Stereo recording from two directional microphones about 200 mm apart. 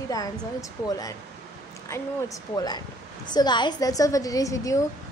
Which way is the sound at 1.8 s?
15° left (ahead or behind).